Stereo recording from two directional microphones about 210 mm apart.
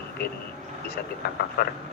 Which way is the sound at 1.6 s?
45° left (ahead or behind).